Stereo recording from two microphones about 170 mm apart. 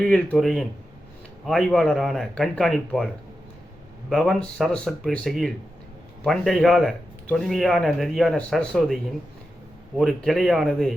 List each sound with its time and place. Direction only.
0.0 s speech: 5° left (ahead or behind)
4.1 s speech: centre (ahead or behind)
10.0 s speech: centre (ahead or behind)